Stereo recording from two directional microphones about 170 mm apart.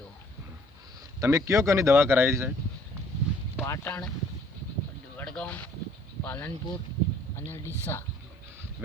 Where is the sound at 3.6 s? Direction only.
15° left (ahead or behind).